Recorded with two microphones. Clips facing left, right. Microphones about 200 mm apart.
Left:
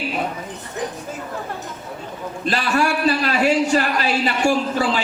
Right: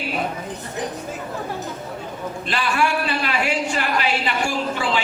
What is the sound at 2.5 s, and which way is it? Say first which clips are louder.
A man's voice: left 2 dB; 40° left (ahead or behind).